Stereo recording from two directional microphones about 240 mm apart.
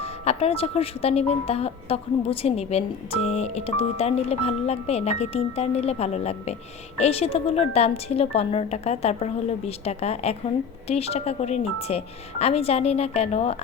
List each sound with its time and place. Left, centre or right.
0.0 s speech: left